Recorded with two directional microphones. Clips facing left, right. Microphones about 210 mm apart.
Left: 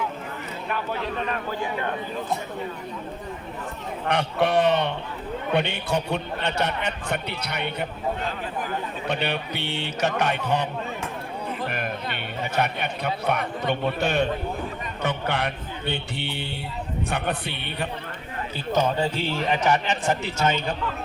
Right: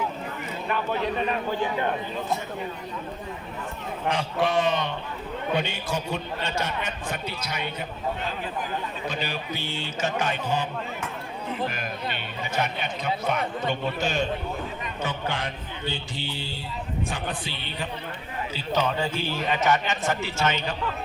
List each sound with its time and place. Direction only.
4.1 s a man's voice: 65° left (ahead or behind)
9.0 s a man's voice: 65° left (ahead or behind)
12.5 s a man's voice: 60° left (ahead or behind)
18.5 s speech: 50° left (ahead or behind)
18.9 s a man's voice: 30° left (ahead or behind)